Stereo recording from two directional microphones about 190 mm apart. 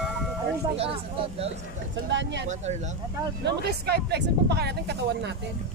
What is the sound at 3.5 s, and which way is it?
Speech, 60° right (ahead or behind).